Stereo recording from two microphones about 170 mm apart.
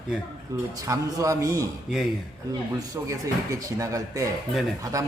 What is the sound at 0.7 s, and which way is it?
Speech, 20° right (ahead or behind).